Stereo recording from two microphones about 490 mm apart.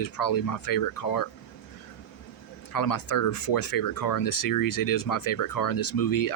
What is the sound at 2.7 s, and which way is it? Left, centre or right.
Speech, left.